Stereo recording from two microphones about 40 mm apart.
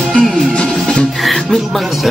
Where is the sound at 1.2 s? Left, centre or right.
Centre.